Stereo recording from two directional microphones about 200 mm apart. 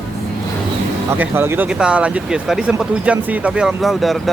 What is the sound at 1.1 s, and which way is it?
Speech, 10° right (ahead or behind).